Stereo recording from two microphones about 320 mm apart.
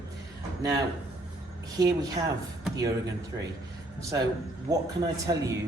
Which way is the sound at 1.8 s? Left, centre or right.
Centre.